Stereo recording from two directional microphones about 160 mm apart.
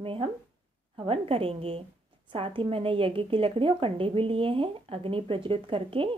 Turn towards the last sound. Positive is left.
turn(degrees=-35)  # may be behind; listen again after turning